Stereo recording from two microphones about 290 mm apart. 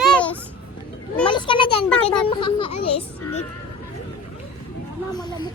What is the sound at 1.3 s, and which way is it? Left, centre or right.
Speech, centre.